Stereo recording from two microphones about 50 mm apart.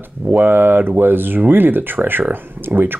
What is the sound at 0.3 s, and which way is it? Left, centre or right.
Speech, right.